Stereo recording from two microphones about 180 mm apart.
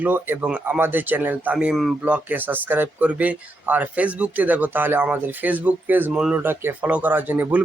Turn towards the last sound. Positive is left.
turn(degrees=-10)  # may be behind; listen again after turning